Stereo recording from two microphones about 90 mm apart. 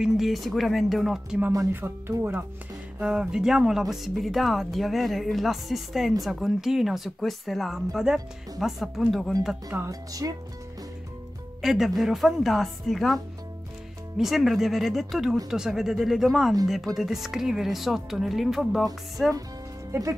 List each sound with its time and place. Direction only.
0.0 s speech: centre (ahead or behind)
1.7 s speech: 25° right (ahead or behind)
3.0 s speech: 10° right (ahead or behind)
9.7 s speech: 35° right (ahead or behind)
11.6 s speech: 5° right (ahead or behind)
19.9 s speech: 35° right (ahead or behind)